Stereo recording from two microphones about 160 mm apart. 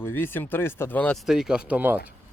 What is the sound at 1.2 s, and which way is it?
Speech, 5° right (ahead or behind).